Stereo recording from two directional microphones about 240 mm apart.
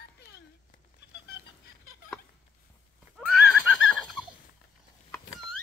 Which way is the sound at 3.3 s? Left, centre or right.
Centre.